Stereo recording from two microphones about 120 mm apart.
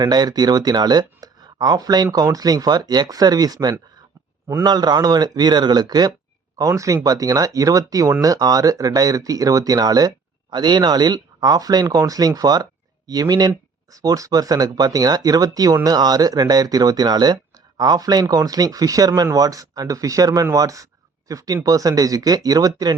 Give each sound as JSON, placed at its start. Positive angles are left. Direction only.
{"t": 0.0, "sound": "speech", "side_deg": -35}